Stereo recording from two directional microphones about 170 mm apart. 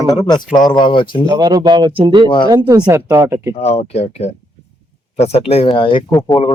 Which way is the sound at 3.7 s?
40° left (ahead or behind).